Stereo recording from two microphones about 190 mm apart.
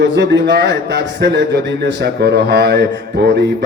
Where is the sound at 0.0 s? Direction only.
65° right (ahead or behind).